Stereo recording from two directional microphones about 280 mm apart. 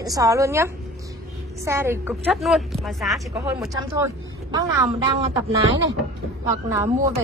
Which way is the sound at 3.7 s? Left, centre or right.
Centre.